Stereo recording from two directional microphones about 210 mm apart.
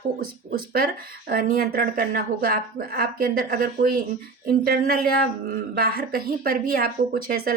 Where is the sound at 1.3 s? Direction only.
45° right (ahead or behind).